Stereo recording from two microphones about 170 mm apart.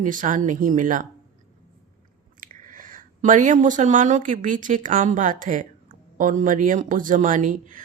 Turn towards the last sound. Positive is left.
turn(degrees=-50)  # may be behind; listen again after turning